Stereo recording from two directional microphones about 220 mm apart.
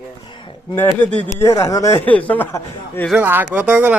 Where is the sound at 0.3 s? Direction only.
20° left (ahead or behind).